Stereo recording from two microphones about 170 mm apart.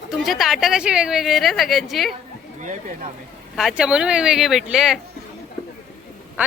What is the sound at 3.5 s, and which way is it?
Speech, centre (ahead or behind).